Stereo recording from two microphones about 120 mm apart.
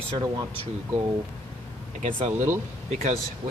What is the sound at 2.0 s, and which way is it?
Speech, 90° right.